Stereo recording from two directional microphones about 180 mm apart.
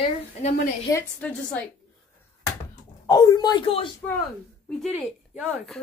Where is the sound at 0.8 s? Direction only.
10° left (ahead or behind).